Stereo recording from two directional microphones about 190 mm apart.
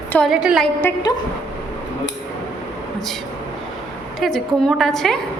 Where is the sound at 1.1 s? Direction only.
20° left (ahead or behind).